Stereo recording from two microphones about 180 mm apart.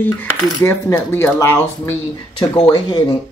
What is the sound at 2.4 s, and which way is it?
Speech, 25° left (ahead or behind).